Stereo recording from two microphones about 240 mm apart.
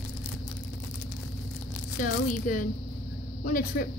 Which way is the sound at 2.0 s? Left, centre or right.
Left.